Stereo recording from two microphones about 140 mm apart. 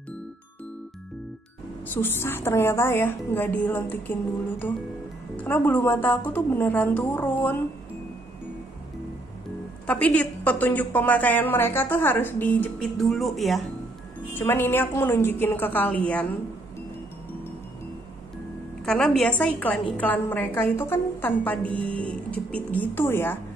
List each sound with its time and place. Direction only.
2.0 s a woman's voice: 15° left (ahead or behind)
9.8 s a woman's voice: 10° left (ahead or behind)
12.8 s speech: centre (ahead or behind)
14.3 s a woman's voice: 15° left (ahead or behind)
18.9 s a woman's voice: 5° left (ahead or behind)